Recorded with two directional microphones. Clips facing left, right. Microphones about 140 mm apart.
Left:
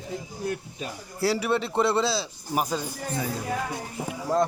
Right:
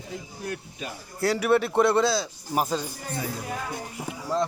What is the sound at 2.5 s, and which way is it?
Speech, 5° left (ahead or behind).